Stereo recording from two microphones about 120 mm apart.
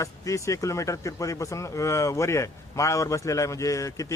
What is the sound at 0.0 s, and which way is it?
Speech, 25° left (ahead or behind).